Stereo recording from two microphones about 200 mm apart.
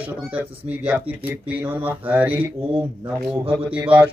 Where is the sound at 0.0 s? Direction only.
5° right (ahead or behind).